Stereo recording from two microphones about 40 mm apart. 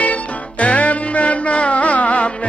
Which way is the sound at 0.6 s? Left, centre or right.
Left.